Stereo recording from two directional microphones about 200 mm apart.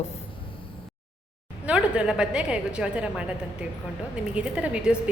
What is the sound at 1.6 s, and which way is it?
A woman's voice, 5° right (ahead or behind).